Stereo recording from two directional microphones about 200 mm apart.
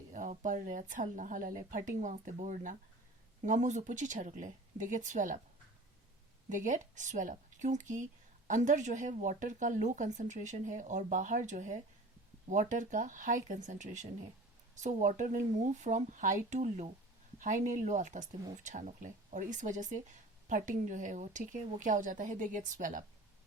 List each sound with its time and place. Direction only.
0.1 s speech: 40° right (ahead or behind)
6.5 s speech: 40° right (ahead or behind)